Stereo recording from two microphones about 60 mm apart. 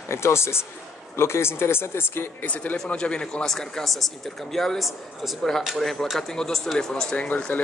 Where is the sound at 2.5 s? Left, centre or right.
Left; by 7.0 s centre.